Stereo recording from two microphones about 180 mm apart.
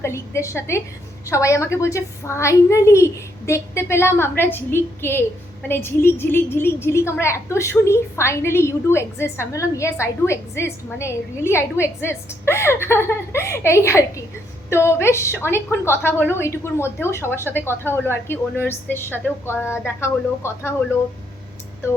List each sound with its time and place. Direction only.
0.0 s a woman's voice: 15° left (ahead or behind)